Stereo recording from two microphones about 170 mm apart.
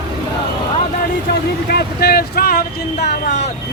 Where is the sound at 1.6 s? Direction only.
70° left (ahead or behind).